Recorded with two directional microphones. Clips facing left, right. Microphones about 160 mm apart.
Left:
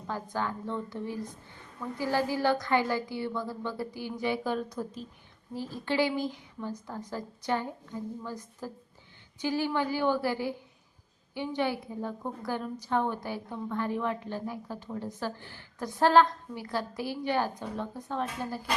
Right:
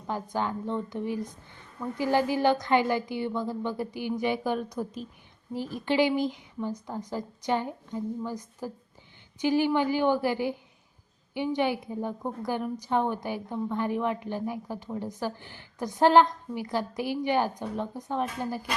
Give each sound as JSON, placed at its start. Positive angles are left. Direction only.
{"t": 0.1, "sound": "a woman's voice", "side_deg": -20}